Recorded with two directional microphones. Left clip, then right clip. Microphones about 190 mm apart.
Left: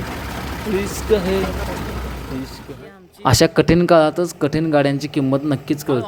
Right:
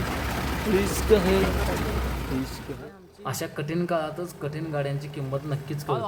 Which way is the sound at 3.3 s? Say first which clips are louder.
Left 17 dB; 45° left (ahead or behind).